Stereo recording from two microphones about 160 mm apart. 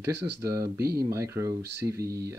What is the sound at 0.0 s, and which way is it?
Speech, 20° right (ahead or behind).